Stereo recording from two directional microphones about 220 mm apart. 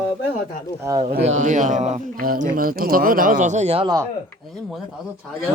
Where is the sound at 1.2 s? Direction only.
30° right (ahead or behind).